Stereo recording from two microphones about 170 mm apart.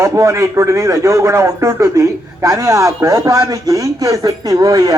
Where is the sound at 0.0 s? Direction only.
15° right (ahead or behind).